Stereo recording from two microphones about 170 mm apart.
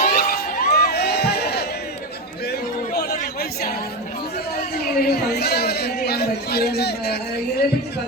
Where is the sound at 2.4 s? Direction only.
70° left (ahead or behind).